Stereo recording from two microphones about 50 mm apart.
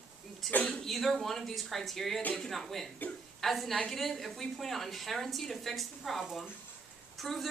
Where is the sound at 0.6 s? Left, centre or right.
Centre.